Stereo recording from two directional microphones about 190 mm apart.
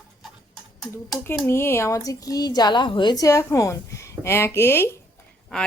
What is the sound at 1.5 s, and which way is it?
A woman's voice, 10° left (ahead or behind).